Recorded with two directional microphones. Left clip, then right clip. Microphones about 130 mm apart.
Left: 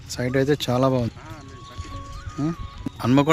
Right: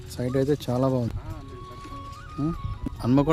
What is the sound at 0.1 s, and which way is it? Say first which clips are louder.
Speech: left 3 dB; 5° left (ahead or behind).